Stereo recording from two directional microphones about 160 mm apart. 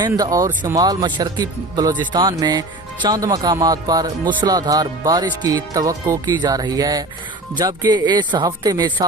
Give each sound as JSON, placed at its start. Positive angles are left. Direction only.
{"t": 0.1, "sound": "speech", "side_deg": -20}